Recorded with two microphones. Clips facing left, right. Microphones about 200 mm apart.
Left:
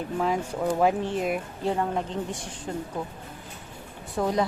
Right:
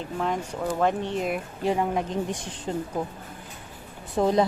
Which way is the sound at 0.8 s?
5° left (ahead or behind).